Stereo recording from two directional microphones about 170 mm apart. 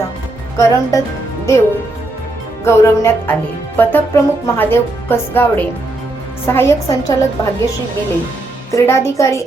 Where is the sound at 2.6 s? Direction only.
15° left (ahead or behind).